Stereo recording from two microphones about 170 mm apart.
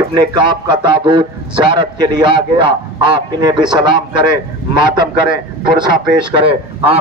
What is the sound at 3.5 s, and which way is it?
Speech, 5° right (ahead or behind).